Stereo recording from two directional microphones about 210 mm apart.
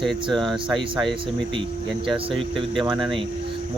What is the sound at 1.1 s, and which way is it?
Speech, 25° right (ahead or behind).